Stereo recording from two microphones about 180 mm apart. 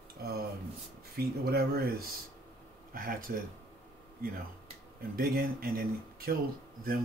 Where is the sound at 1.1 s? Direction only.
60° right (ahead or behind).